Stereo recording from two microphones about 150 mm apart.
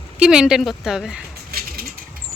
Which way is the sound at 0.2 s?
5° right (ahead or behind).